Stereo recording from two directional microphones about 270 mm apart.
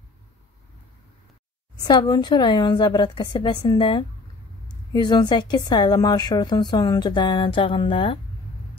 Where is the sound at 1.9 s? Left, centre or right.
Centre.